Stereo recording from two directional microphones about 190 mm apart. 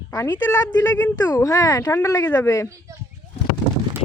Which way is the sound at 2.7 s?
15° right (ahead or behind).